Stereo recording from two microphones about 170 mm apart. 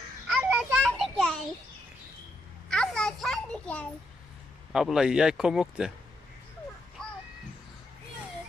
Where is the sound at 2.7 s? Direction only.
5° left (ahead or behind).